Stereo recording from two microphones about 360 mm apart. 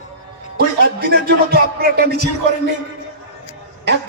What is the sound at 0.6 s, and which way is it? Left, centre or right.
Speech, right.